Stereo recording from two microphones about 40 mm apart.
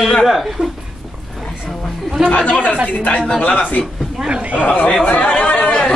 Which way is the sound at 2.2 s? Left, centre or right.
Left.